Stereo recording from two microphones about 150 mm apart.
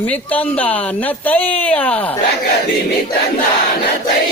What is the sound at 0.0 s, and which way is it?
Speech, 10° left (ahead or behind).